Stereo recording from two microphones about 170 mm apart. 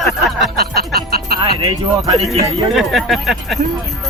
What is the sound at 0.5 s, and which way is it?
Music, 65° right (ahead or behind).